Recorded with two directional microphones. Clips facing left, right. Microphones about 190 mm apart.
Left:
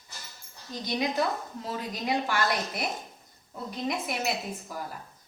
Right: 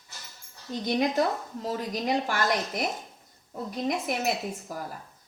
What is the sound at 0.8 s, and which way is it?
A woman's voice, 50° right (ahead or behind).